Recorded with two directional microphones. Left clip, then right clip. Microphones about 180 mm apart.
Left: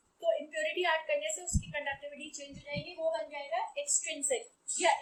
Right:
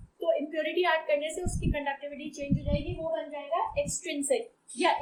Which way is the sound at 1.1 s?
15° right (ahead or behind).